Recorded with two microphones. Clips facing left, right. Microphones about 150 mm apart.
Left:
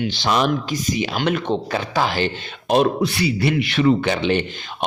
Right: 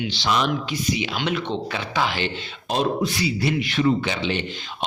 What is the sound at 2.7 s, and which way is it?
Speech, 60° left (ahead or behind).